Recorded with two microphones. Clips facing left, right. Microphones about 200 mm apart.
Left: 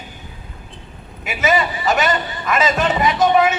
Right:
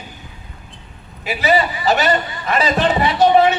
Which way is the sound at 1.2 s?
35° right (ahead or behind).